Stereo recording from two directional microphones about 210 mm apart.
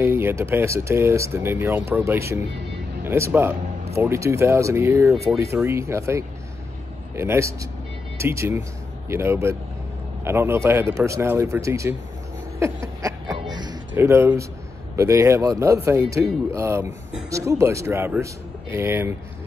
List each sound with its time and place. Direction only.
0.0 s speech: 10° right (ahead or behind)
12.5 s a sound: 15° right (ahead or behind)
13.9 s speech: 10° right (ahead or behind)